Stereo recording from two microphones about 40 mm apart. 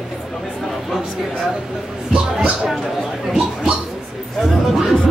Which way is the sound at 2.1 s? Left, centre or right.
Right.